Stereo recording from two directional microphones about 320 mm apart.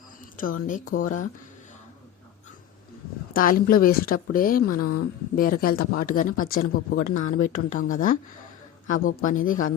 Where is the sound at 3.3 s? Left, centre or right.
Left.